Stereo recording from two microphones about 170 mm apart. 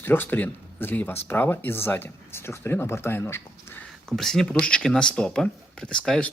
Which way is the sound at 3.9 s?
Centre (ahead or behind).